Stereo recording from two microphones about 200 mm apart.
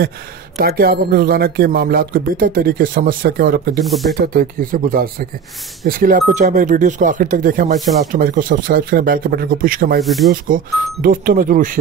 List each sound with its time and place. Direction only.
0.6 s speech: 50° right (ahead or behind)
3.8 s speech: centre (ahead or behind)
4.1 s speech: 45° right (ahead or behind)
10.0 s speech: centre (ahead or behind)
10.3 s speech: 45° right (ahead or behind)